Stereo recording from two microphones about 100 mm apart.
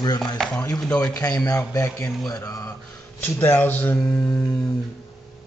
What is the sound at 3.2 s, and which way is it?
Speech, 25° left (ahead or behind).